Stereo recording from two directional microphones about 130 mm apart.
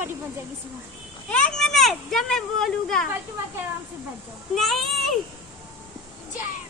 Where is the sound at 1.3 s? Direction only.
5° left (ahead or behind).